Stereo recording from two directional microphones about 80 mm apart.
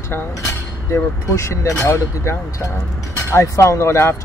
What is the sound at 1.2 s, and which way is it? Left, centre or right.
Speech, left.